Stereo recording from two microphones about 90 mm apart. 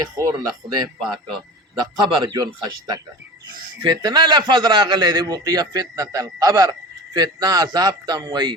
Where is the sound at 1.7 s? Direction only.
55° right (ahead or behind).